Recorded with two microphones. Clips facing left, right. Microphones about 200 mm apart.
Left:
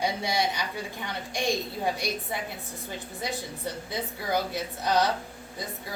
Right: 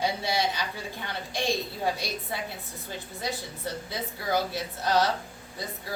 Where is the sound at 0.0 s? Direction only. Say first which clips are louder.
Even; 15° left (ahead or behind).